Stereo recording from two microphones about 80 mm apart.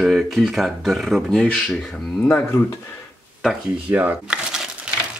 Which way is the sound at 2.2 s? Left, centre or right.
Left.